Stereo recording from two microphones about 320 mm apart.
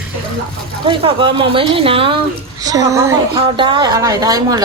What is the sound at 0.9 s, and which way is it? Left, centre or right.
Speech, centre.